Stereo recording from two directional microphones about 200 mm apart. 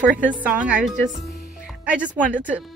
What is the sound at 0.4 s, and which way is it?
Speech, 5° right (ahead or behind).